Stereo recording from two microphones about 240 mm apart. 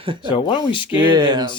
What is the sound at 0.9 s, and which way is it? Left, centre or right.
Speech, centre.